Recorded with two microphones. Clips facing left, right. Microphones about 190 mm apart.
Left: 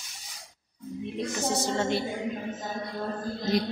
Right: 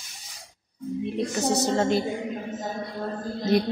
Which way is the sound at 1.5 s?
45° right (ahead or behind).